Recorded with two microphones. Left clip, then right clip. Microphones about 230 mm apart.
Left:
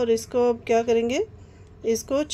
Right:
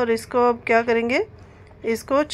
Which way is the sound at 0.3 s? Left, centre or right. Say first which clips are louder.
Right 3 dB; centre.